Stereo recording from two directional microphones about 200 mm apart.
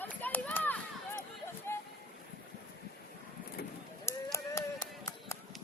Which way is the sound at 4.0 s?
15° left (ahead or behind).